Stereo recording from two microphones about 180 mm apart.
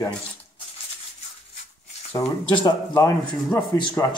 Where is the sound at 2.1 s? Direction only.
25° left (ahead or behind).